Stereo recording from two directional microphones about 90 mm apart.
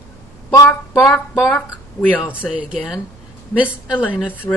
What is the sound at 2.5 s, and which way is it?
Speech, 15° right (ahead or behind).